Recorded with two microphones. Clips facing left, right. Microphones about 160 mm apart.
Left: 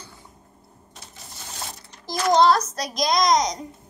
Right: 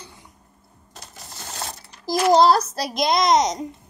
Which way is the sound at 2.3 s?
35° right (ahead or behind).